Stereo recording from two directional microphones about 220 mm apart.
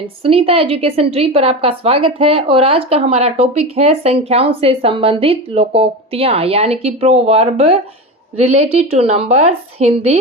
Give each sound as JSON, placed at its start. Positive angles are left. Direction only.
{"t": 0.2, "sound": "speech", "side_deg": -25}